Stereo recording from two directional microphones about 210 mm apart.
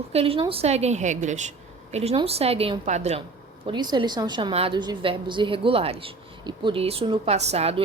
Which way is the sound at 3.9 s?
20° right (ahead or behind).